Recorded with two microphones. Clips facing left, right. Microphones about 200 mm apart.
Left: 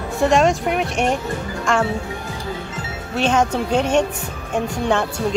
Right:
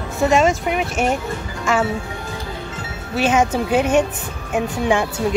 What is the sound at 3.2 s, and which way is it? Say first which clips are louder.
A woman's voice: right 1 dB; 5° right (ahead or behind).